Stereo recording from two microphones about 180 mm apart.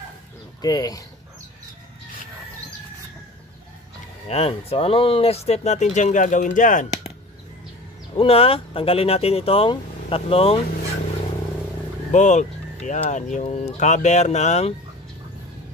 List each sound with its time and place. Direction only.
0.6 s speech: 20° left (ahead or behind)
4.3 s speech: 35° left (ahead or behind)
8.2 s speech: 30° left (ahead or behind)
12.1 s speech: 40° left (ahead or behind)